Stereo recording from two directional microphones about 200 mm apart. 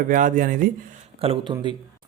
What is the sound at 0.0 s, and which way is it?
Speech, 40° right (ahead or behind).